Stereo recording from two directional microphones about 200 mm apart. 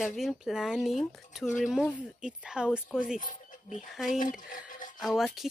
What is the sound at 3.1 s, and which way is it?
Speech, 40° left (ahead or behind).